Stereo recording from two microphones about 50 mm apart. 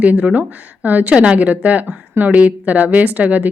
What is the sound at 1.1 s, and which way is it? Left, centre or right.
Speech, centre.